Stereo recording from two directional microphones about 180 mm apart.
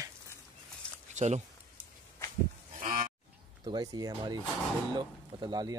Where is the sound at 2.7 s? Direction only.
50° right (ahead or behind).